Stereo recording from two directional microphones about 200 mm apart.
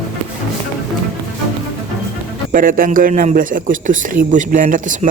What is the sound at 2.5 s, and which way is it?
A man's voice, 45° right (ahead or behind).